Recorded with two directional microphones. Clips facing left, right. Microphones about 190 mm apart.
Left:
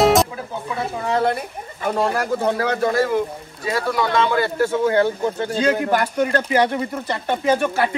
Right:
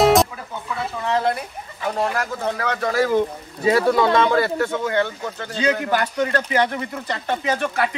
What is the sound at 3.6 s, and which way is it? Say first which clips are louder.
Speech: right 5 dB; 25° right (ahead or behind).